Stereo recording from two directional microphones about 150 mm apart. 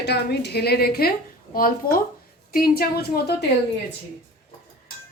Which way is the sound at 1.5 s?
75° left (ahead or behind).